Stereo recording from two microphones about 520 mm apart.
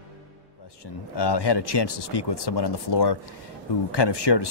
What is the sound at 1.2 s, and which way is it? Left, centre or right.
Speech, left.